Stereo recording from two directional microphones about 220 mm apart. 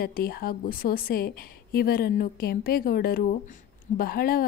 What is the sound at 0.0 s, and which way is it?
A woman's voice, 45° left (ahead or behind).